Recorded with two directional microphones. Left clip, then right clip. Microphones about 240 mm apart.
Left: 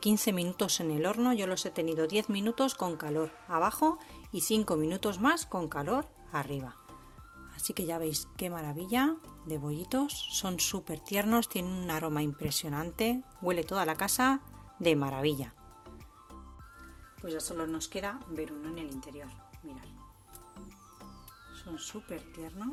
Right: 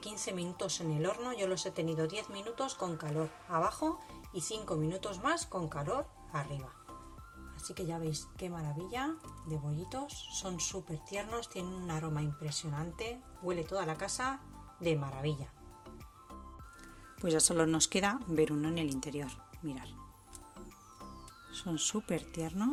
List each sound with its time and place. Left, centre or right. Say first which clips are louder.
0.0 s speech: left 9 dB; left
7.7 s speech: left 5 dB; left
17.2 s speech: right 6 dB; right
22.1 s speech: right 5 dB; right